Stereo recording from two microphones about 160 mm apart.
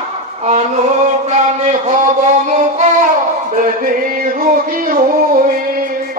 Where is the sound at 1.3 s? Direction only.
45° right (ahead or behind).